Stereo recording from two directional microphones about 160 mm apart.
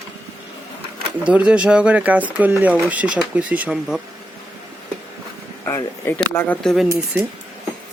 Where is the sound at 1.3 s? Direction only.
5° right (ahead or behind).